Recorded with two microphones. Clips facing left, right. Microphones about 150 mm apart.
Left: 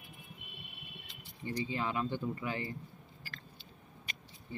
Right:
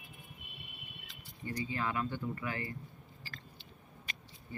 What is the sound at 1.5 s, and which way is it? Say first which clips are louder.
Speech: left 1 dB; 20° left (ahead or behind).